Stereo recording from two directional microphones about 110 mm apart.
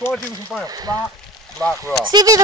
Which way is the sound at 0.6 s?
35° right (ahead or behind).